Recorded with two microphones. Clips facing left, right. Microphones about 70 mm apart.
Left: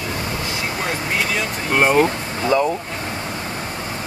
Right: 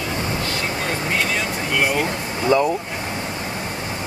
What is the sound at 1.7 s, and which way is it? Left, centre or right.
Speech, left.